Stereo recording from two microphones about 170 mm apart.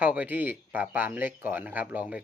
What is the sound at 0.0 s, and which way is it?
Speech, 10° right (ahead or behind).